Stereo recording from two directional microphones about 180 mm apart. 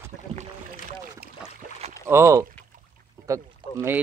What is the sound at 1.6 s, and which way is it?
Boat, 40° right (ahead or behind).